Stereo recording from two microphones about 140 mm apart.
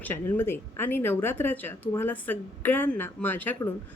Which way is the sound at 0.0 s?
15° left (ahead or behind).